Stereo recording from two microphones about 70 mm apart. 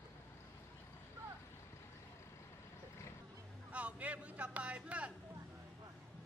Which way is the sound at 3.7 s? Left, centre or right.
Centre.